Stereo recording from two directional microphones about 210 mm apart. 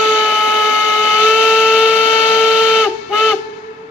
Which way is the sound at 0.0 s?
5° right (ahead or behind).